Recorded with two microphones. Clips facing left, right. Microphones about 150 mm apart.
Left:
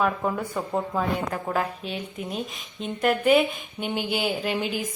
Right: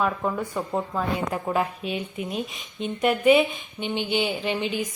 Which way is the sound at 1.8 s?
35° left (ahead or behind).